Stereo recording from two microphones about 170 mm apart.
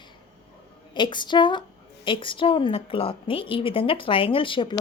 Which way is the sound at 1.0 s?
25° left (ahead or behind).